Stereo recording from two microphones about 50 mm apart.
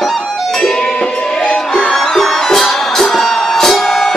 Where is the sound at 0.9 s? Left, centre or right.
Left.